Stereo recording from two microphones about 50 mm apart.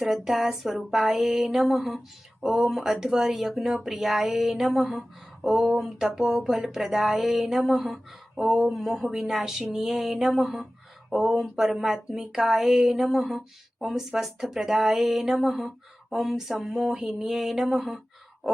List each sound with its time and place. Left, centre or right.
0.0 s speech: centre
8.4 s speech: centre